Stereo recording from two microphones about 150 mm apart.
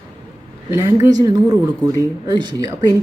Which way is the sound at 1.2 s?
25° right (ahead or behind).